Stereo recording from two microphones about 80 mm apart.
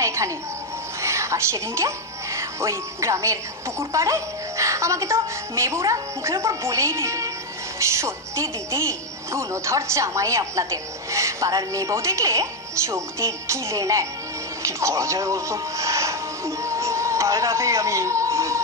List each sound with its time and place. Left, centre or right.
0.0 s music: right
1.0 s a woman's voice: right
14.6 s music: right